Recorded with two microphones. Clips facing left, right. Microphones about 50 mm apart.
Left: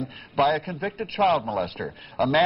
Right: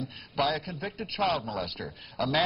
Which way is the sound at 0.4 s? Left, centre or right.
Left.